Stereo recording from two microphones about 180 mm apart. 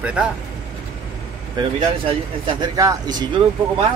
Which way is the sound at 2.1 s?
25° right (ahead or behind).